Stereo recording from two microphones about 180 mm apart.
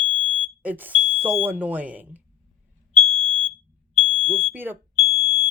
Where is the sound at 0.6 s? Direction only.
10° right (ahead or behind).